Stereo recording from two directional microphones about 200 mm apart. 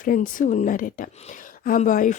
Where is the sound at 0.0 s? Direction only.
45° left (ahead or behind).